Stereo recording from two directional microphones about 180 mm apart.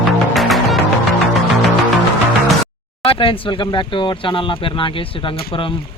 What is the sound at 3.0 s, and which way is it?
Speech, 30° left (ahead or behind).